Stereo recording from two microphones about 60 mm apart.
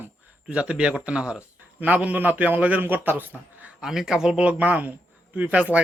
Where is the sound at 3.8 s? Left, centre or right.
Centre.